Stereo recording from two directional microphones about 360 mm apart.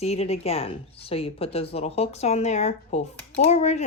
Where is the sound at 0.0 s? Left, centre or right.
Centre.